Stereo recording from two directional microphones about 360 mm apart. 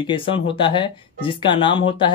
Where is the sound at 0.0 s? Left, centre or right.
Centre.